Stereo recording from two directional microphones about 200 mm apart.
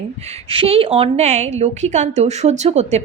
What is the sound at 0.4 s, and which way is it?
A woman's voice, 30° right (ahead or behind).